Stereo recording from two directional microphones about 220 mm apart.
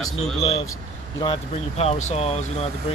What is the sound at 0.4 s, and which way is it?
Speech, 25° left (ahead or behind).